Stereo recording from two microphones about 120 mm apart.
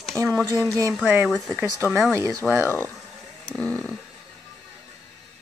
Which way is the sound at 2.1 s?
25° right (ahead or behind).